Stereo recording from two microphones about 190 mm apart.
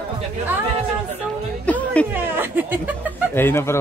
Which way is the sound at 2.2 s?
10° right (ahead or behind).